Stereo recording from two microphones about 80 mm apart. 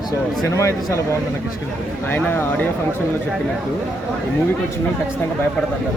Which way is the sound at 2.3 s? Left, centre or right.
Left.